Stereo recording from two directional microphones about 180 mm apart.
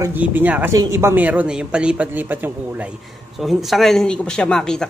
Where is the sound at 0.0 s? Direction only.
10° right (ahead or behind).